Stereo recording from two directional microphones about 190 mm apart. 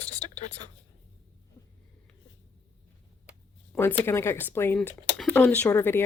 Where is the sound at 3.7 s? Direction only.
10° left (ahead or behind).